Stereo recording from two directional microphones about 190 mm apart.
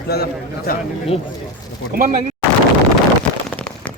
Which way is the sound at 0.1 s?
55° left (ahead or behind).